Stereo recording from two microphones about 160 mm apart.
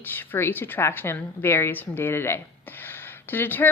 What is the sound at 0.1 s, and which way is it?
Speech, 15° left (ahead or behind).